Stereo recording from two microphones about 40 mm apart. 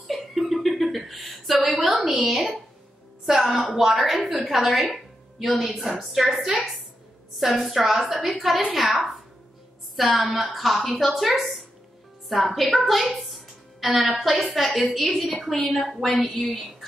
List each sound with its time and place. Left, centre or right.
0.0 s a sound: centre
3.3 s a woman's voice: centre
6.3 s a woman's voice: centre
7.3 s a woman's voice: centre
9.9 s a woman's voice: centre